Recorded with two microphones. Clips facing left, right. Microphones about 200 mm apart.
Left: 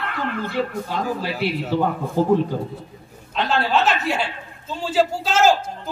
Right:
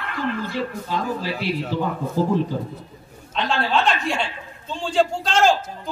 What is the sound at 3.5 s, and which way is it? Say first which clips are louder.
A woman's voice: left 1 dB; 5° left (ahead or behind).